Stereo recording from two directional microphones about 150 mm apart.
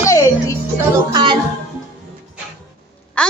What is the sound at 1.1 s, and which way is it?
Music, 30° right (ahead or behind).